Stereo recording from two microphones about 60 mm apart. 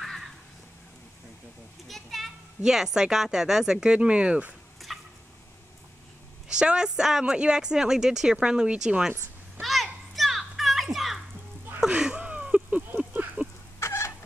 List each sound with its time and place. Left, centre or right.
1.9 s children playing: centre
2.6 s speech: centre
4.9 s fowl: centre
6.5 s speech: centre
9.6 s children playing: centre
11.9 s a sound: right
13.7 s chicken: left